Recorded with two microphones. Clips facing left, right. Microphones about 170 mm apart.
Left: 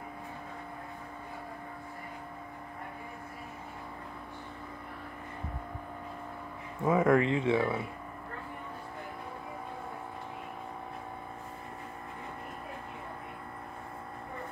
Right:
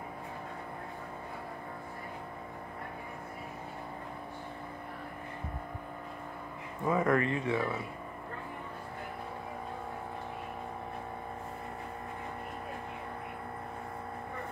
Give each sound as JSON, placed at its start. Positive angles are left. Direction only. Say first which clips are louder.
{"t": 6.9, "sound": "speech", "louder": "left 3 dB", "side_deg": 10}